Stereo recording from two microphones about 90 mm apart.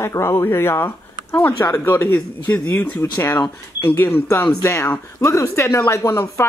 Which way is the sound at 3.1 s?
35° left (ahead or behind).